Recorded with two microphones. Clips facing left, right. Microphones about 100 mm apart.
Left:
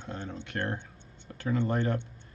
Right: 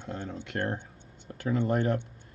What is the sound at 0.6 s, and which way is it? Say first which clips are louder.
Speech: right 2 dB; 45° right (ahead or behind).